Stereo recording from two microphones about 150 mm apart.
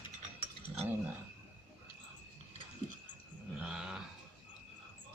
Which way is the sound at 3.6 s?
5° right (ahead or behind).